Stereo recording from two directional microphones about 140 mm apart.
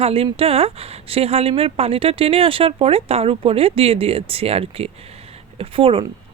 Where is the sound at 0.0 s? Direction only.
45° right (ahead or behind).